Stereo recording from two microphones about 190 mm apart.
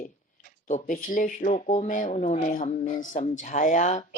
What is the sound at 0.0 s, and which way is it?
Speech, 40° left (ahead or behind).